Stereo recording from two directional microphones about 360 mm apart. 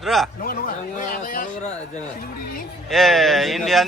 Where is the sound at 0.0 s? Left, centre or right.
Centre.